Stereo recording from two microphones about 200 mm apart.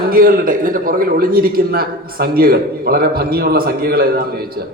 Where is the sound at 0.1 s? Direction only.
45° right (ahead or behind).